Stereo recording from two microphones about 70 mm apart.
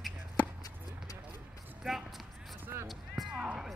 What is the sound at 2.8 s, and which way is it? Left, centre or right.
Music, centre.